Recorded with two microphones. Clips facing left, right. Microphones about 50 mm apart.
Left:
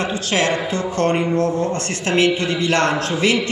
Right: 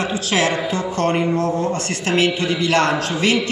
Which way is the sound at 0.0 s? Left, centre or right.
Centre.